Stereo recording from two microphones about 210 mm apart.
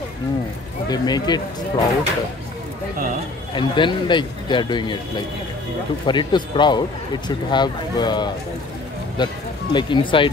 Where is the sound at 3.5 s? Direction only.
20° left (ahead or behind).